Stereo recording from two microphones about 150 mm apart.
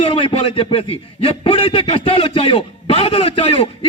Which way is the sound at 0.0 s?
35° left (ahead or behind).